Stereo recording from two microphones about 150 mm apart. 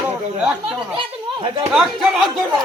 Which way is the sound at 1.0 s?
35° right (ahead or behind).